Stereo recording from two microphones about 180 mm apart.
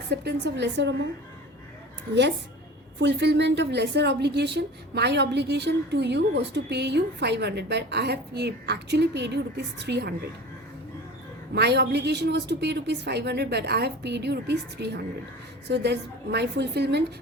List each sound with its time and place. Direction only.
0.1 s a woman's voice: 70° right (ahead or behind)
3.0 s a woman's voice: 70° right (ahead or behind)
11.5 s a woman's voice: 70° right (ahead or behind)